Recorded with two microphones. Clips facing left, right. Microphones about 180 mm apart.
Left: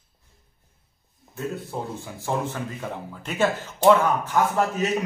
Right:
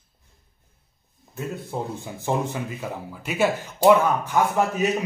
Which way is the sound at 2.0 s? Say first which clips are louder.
Right 2 dB; 15° right (ahead or behind).